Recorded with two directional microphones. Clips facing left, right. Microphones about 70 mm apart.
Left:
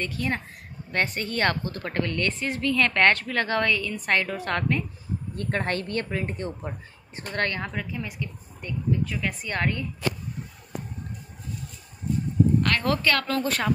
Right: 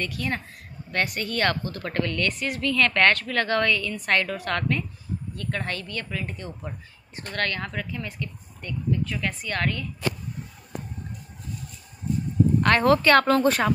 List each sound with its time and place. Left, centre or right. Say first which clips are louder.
0.0 s a woman's voice: left 1 dB; left
5.3 s a woman's voice: left 4 dB; left
12.6 s a woman's voice: right 5 dB; right